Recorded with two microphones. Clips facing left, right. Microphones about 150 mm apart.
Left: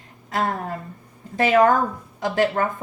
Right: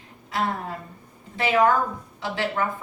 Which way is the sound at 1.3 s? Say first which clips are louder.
Left 4 dB; 45° left (ahead or behind).